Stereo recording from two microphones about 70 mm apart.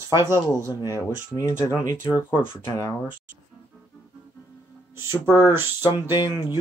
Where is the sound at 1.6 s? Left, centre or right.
Left.